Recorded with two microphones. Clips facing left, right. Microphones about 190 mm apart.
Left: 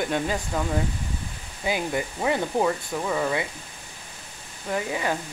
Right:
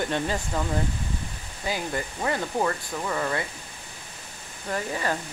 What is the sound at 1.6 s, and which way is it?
Speech, 15° left (ahead or behind).